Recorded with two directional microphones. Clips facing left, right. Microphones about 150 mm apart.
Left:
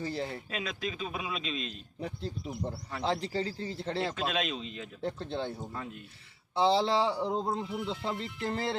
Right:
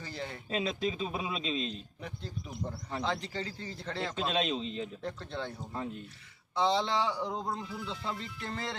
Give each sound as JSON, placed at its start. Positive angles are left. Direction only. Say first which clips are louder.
{"t": 0.0, "sound": "speech", "louder": "left 6 dB", "side_deg": 30}
{"t": 0.5, "sound": "speech", "louder": "right 4 dB", "side_deg": -30}
{"t": 2.0, "sound": "speech", "louder": "left 5 dB", "side_deg": 30}
{"t": 4.1, "sound": "speech", "louder": "right 1 dB", "side_deg": -30}
{"t": 5.0, "sound": "speech", "louder": "left 4 dB", "side_deg": 30}
{"t": 6.6, "sound": "speech", "louder": "left 3 dB", "side_deg": 30}